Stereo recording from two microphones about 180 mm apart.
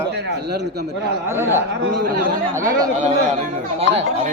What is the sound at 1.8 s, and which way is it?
Speech, 65° right (ahead or behind).